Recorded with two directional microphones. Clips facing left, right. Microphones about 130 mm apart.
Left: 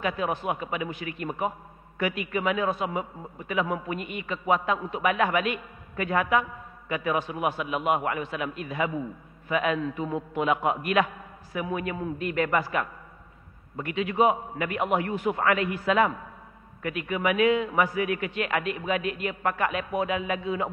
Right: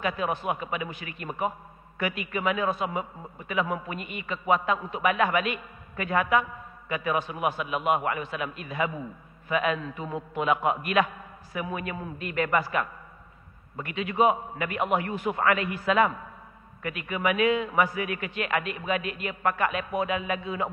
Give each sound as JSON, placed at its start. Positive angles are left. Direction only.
{"t": 0.0, "sound": "a man's voice", "side_deg": 25}
{"t": 17.1, "sound": "a man's voice", "side_deg": 20}